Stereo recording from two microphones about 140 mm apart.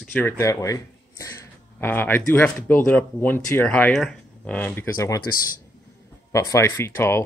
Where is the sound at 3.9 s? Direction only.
Centre (ahead or behind); by 5.2 s 20° left (ahead or behind).